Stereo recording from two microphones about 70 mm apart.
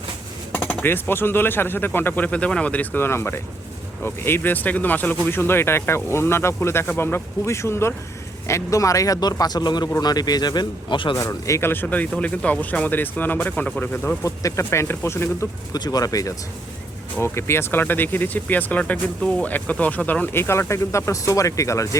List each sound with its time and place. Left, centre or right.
0.5 s speech: left
3.1 s speech: left
10.0 s speech: left
11.1 s speech: left
11.6 s speech: left
14.3 s speech: left
15.7 s speech: left
17.2 s speech: left